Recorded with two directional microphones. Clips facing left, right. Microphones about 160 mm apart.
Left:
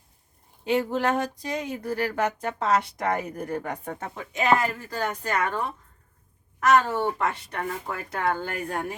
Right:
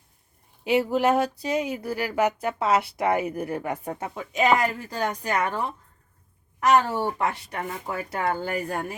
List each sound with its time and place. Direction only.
0.6 s speech: 10° right (ahead or behind)